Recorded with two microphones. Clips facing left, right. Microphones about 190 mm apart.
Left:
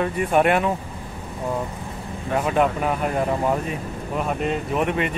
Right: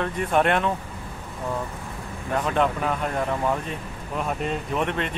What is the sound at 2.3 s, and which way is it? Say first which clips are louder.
Speech: left 3 dB; 5° left (ahead or behind).